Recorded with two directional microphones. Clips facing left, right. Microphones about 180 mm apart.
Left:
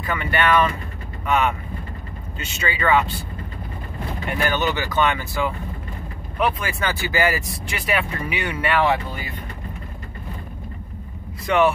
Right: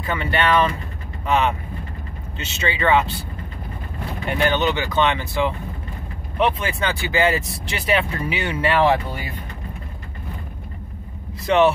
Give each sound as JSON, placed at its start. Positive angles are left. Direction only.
{"t": 0.0, "sound": "speech", "side_deg": -25}
{"t": 2.3, "sound": "speech", "side_deg": -25}
{"t": 4.4, "sound": "speech", "side_deg": -20}
{"t": 11.4, "sound": "speech", "side_deg": -25}